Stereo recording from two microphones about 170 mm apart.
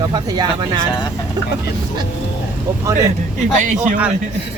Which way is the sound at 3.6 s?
45° right (ahead or behind).